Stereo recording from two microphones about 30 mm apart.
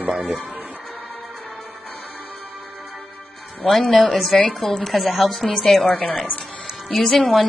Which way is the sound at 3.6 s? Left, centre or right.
Centre.